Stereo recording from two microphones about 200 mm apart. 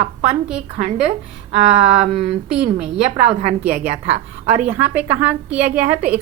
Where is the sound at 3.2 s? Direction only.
30° right (ahead or behind).